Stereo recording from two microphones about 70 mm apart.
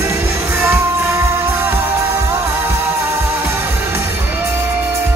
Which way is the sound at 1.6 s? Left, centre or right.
Right.